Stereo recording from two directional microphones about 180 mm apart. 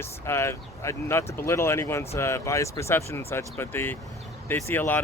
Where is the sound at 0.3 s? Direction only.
15° left (ahead or behind).